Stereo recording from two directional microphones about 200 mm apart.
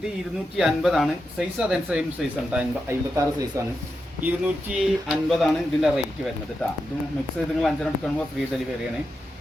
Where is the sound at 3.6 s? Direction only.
15° right (ahead or behind).